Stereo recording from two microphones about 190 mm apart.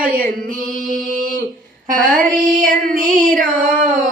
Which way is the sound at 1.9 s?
45° right (ahead or behind).